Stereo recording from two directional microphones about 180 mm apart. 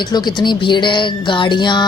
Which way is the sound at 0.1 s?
25° left (ahead or behind).